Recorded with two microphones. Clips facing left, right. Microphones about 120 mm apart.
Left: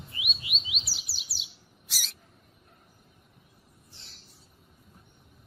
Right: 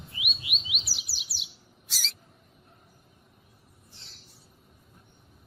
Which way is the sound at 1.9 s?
10° left (ahead or behind).